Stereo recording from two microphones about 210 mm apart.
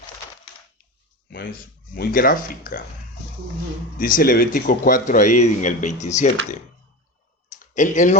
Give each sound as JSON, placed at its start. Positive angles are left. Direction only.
{"t": 1.3, "sound": "speech", "side_deg": 50}
{"t": 3.9, "sound": "speech", "side_deg": 40}
{"t": 7.6, "sound": "speech", "side_deg": 35}